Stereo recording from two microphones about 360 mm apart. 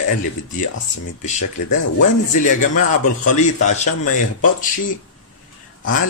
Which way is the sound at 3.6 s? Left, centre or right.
Centre.